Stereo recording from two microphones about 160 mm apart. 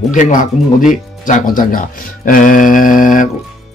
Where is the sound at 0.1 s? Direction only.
55° left (ahead or behind).